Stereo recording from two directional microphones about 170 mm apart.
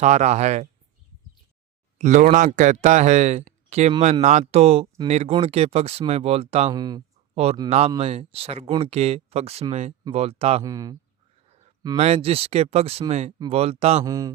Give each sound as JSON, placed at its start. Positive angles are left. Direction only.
{"t": 0.0, "sound": "speech", "side_deg": -45}
{"t": 2.0, "sound": "speech", "side_deg": -45}
{"t": 6.7, "sound": "speech", "side_deg": -25}
{"t": 7.7, "sound": "speech", "side_deg": -35}
{"t": 10.6, "sound": "speech", "side_deg": -20}
{"t": 11.4, "sound": "a sound", "side_deg": -35}
{"t": 11.9, "sound": "speech", "side_deg": -35}
{"t": 14.0, "sound": "speech", "side_deg": -20}